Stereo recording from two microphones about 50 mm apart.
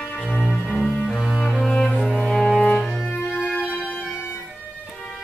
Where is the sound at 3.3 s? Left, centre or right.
Left.